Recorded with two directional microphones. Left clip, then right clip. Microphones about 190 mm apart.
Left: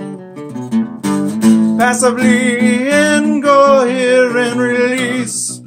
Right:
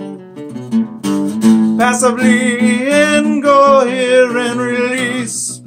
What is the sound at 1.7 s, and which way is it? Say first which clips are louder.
Music: even; 5° left (ahead or behind).